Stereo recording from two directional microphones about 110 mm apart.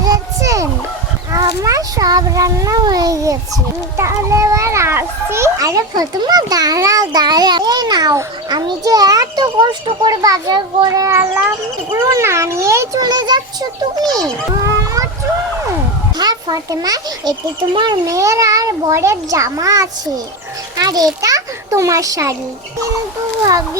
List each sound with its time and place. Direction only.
0.0 s a sound: 30° right (ahead or behind)
1.3 s cat: 30° right (ahead or behind)
3.9 s a child's voice: 25° right (ahead or behind); by 10.1 s 45° right (ahead or behind)
10.1 s a child's voice: 35° right (ahead or behind)
16.1 s a child's voice: 40° right (ahead or behind)
17.7 s a child's voice: 45° right (ahead or behind)
18.0 s a child's voice: 30° right (ahead or behind)